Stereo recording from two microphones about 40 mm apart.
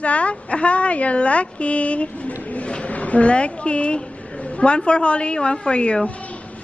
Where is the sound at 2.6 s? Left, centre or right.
Left.